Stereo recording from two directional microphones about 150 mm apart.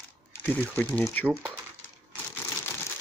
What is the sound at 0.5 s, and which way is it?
Speech, 10° left (ahead or behind).